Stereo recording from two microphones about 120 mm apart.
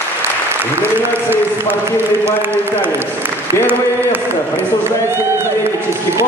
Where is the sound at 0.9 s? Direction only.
15° right (ahead or behind).